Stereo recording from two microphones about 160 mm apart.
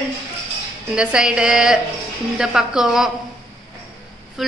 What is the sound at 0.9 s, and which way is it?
A woman's voice, 5° right (ahead or behind).